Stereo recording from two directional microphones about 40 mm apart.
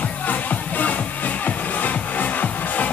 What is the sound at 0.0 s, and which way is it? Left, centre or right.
Music, left.